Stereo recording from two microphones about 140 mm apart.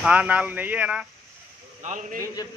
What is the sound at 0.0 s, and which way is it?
Speech, 10° right (ahead or behind).